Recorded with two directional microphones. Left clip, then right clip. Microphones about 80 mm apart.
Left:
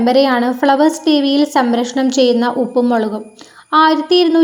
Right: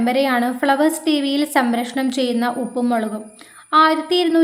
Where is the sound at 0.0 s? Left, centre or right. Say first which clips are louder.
Left 6 dB; centre.